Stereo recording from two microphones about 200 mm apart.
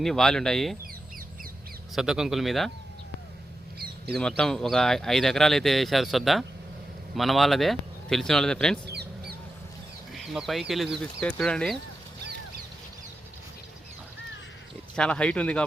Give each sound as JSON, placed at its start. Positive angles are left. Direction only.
{"t": 0.0, "sound": "speech", "side_deg": 0}
{"t": 2.0, "sound": "speech", "side_deg": -5}
{"t": 3.8, "sound": "a sound", "side_deg": -50}
{"t": 4.2, "sound": "speech", "side_deg": 5}
{"t": 8.9, "sound": "duck", "side_deg": -55}
{"t": 10.1, "sound": "speech", "side_deg": 0}
{"t": 14.9, "sound": "speech", "side_deg": 5}